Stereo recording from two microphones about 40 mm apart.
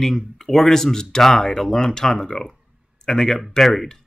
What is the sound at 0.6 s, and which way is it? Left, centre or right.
Speech, centre.